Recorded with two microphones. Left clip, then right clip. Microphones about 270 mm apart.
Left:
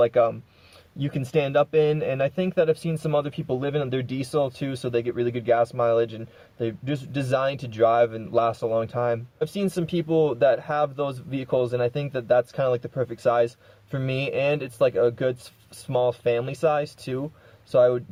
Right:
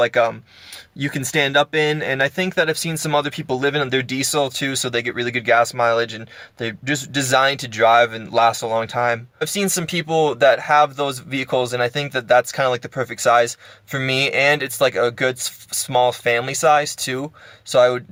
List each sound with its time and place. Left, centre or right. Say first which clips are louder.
0.0 s speech: right 3 dB; centre